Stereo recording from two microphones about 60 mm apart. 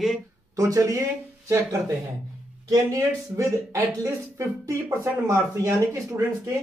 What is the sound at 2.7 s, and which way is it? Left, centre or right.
Speech, right.